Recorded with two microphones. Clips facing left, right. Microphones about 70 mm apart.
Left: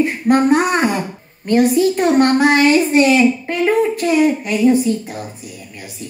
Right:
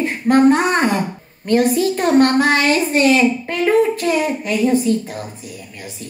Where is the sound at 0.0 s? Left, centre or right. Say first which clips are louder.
Right 1 dB; centre.